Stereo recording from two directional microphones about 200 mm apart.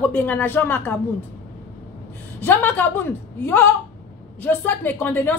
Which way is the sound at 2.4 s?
10° left (ahead or behind).